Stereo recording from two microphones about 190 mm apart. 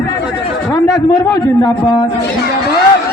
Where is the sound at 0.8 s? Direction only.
15° left (ahead or behind).